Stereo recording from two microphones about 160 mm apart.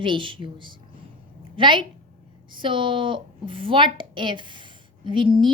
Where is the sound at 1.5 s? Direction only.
30° right (ahead or behind).